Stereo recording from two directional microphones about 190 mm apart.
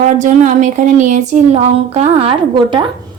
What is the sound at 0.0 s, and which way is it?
Speech, 40° right (ahead or behind).